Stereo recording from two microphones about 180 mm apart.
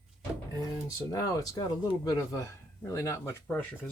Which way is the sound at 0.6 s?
20° left (ahead or behind).